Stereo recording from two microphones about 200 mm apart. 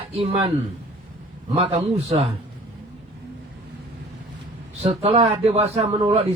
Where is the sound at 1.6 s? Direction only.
30° right (ahead or behind).